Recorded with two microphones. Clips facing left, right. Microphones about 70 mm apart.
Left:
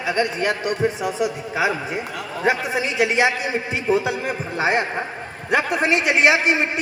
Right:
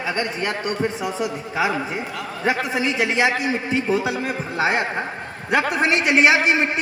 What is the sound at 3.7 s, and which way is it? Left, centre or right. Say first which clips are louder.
A man's voice: left 2 dB; left.